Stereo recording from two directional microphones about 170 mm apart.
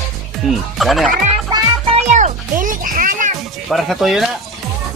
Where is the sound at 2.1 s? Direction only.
45° right (ahead or behind).